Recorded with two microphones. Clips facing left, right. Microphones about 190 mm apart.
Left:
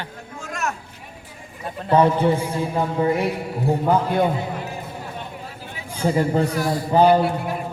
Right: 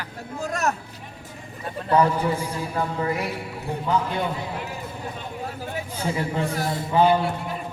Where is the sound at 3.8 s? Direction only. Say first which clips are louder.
Left 4 dB; 50° left (ahead or behind).